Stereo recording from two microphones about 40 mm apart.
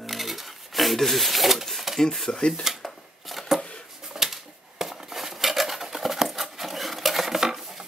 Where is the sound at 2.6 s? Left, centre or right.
Centre.